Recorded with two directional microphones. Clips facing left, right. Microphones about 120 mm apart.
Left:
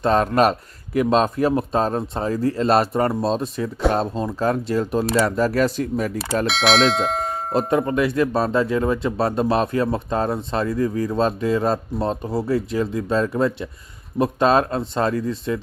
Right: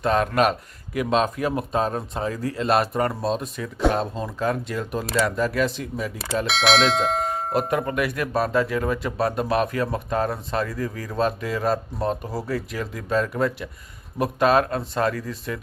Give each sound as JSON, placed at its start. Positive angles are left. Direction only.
{"t": 0.0, "sound": "speech", "side_deg": 35}
{"t": 6.4, "sound": "speech", "side_deg": 0}
{"t": 7.5, "sound": "speech", "side_deg": 30}